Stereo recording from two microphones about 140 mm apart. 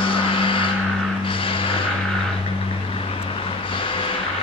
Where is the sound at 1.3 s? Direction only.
40° left (ahead or behind).